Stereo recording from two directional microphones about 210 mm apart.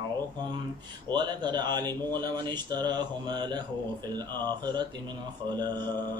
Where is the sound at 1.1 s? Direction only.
20° right (ahead or behind).